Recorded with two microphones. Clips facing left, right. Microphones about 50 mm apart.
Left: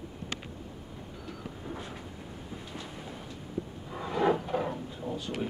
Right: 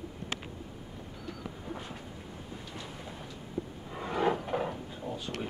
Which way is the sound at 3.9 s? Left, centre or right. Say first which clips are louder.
Left 1 dB; centre.